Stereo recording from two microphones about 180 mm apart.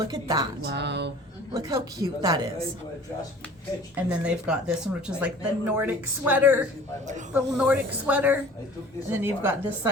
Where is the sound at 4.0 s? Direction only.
5° right (ahead or behind).